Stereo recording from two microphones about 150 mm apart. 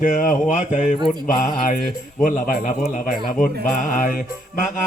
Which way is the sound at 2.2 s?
60° left (ahead or behind).